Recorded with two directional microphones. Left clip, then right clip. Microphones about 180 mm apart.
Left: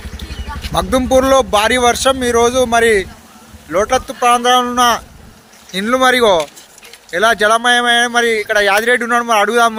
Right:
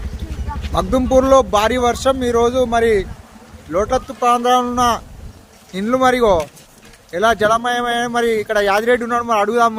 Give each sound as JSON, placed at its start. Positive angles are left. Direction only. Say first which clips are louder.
{"t": 0.7, "sound": "speech", "louder": "left 2 dB", "side_deg": -5}